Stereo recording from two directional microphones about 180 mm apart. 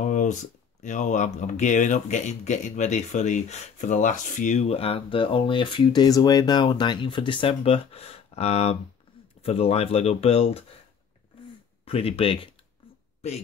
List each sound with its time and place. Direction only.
0.0 s a sound: 45° left (ahead or behind)
0.8 s speech: 45° left (ahead or behind)
11.8 s speech: 35° left (ahead or behind)